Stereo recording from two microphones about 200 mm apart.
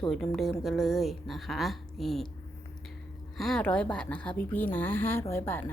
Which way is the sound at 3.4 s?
5° left (ahead or behind).